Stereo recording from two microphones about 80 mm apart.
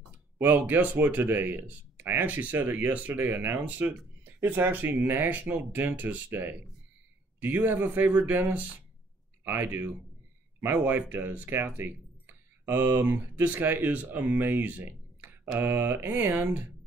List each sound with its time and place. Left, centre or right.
0.1 s speech: right